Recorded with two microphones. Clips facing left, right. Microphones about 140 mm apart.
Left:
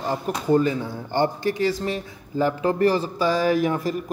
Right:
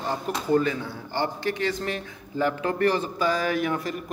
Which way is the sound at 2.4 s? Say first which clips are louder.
Left 3 dB; 35° left (ahead or behind).